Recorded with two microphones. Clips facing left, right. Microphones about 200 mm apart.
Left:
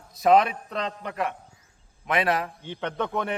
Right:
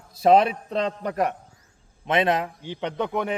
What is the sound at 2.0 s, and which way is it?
A man's voice, 25° right (ahead or behind).